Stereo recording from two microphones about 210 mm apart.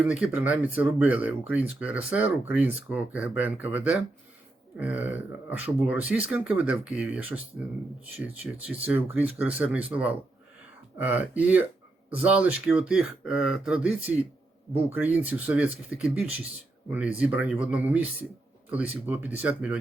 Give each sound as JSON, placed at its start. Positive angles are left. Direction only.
{"t": 0.0, "sound": "speech", "side_deg": -5}